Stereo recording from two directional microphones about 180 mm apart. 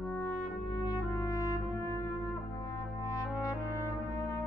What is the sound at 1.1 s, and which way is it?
Brass instrument, 20° left (ahead or behind).